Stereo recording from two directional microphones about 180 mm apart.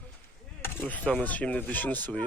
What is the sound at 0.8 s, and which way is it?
Speech, 10° left (ahead or behind).